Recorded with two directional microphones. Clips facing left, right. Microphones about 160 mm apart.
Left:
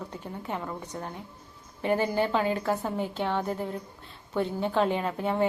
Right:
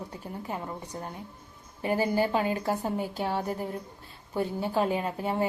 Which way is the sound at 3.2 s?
40° right (ahead or behind).